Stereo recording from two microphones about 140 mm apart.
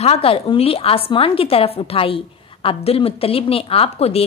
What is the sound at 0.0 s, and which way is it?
A woman's voice, 45° left (ahead or behind).